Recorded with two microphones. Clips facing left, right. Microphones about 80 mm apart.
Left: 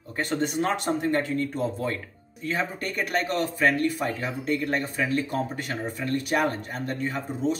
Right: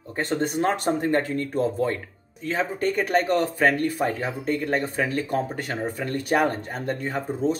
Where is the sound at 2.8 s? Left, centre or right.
Right.